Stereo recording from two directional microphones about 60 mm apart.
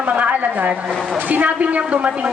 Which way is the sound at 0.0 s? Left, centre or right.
Right.